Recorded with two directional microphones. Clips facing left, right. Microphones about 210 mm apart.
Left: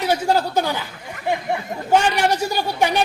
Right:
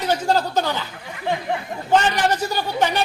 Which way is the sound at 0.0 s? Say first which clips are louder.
Left 1 dB; 10° left (ahead or behind).